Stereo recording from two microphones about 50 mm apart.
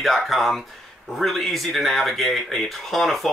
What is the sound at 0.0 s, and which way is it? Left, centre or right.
Speech, centre.